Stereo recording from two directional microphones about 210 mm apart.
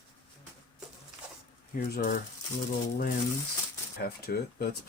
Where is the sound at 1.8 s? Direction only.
40° left (ahead or behind).